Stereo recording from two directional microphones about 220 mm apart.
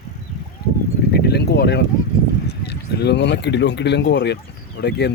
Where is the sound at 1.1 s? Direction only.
50° left (ahead or behind).